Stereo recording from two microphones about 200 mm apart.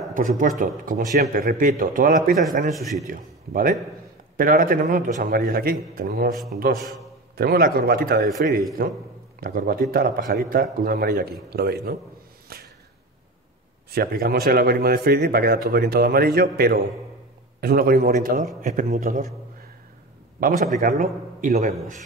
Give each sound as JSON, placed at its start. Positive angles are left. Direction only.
{"t": 0.1, "sound": "speech", "side_deg": -40}
{"t": 2.7, "sound": "a man's voice", "side_deg": 0}
{"t": 3.1, "sound": "speech", "side_deg": -45}
{"t": 6.3, "sound": "a man's voice", "side_deg": 0}
{"t": 7.3, "sound": "speech", "side_deg": -50}
{"t": 12.5, "sound": "a sound", "side_deg": -50}
{"t": 13.8, "sound": "a man's voice", "side_deg": -50}
{"t": 20.3, "sound": "speech", "side_deg": -45}